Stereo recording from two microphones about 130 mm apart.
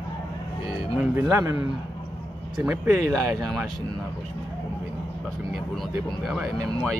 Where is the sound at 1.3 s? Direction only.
20° right (ahead or behind).